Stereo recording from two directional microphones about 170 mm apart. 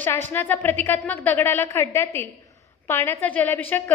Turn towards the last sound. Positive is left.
turn(degrees=10)  # may be behind; listen again after turning